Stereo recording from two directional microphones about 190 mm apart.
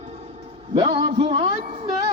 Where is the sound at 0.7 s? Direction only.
25° right (ahead or behind).